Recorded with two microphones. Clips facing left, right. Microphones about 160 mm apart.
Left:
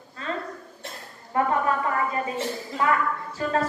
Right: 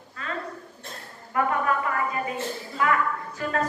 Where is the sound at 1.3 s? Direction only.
30° left (ahead or behind).